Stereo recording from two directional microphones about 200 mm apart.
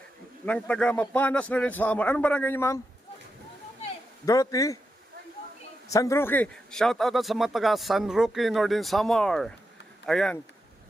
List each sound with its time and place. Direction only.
0.4 s a man's voice: 5° left (ahead or behind)
4.3 s a man's voice: 15° left (ahead or behind)
5.9 s a man's voice: 15° left (ahead or behind)